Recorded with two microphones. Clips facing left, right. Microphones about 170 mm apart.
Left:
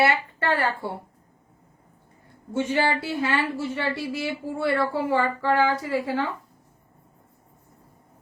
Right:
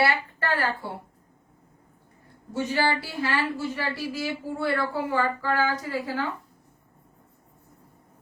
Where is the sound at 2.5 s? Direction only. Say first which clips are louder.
Left 2 dB; 25° left (ahead or behind).